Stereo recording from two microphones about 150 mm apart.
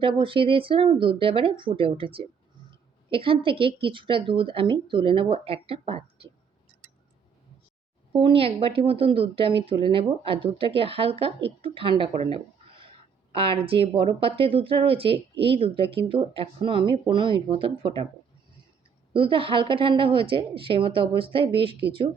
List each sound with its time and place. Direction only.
0.0 s speech: 35° right (ahead or behind)
8.1 s speech: 35° right (ahead or behind)
19.1 s speech: 35° right (ahead or behind)